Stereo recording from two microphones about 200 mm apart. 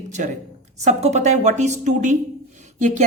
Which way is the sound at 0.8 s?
35° right (ahead or behind).